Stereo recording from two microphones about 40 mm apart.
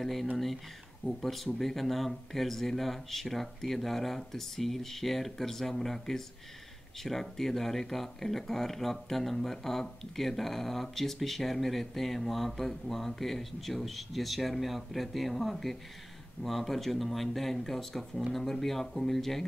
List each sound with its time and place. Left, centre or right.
0.0 s speech: centre